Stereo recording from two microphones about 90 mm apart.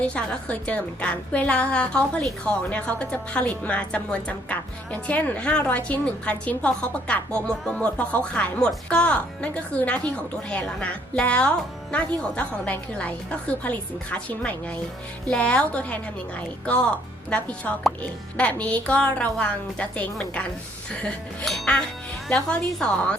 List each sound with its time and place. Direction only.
0.1 s speech: 10° left (ahead or behind)
17.2 s speech: 15° left (ahead or behind)
21.4 s speech: 5° left (ahead or behind)